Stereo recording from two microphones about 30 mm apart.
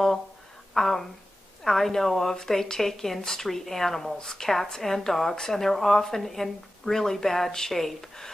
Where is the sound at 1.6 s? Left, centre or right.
Centre.